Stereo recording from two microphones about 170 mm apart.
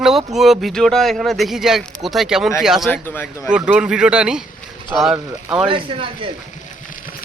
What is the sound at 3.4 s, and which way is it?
Speech, 5° right (ahead or behind).